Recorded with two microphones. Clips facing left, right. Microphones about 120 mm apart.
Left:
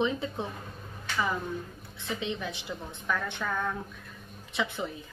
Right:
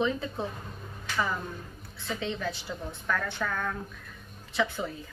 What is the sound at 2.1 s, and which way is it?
Speech, 15° left (ahead or behind).